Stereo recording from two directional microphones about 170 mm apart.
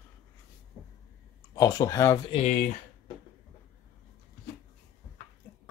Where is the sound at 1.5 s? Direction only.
20° left (ahead or behind).